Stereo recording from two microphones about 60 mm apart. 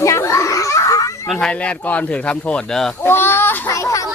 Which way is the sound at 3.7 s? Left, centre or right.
Left.